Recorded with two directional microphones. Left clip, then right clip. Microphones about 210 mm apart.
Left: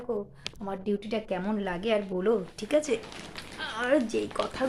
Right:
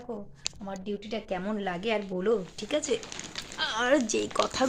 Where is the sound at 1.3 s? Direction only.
Centre (ahead or behind).